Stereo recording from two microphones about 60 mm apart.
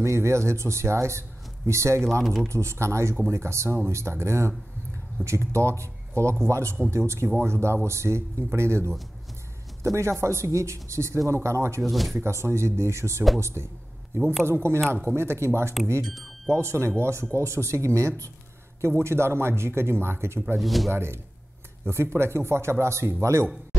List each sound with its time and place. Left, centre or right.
0.0 s speech: right
2.2 s speech: centre
2.5 s speech: right
11.8 s speech: centre
12.2 s speech: right
18.8 s speech: right
20.5 s speech: centre
20.9 s speech: right